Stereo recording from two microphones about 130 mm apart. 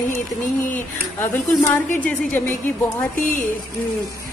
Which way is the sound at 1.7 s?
15° left (ahead or behind).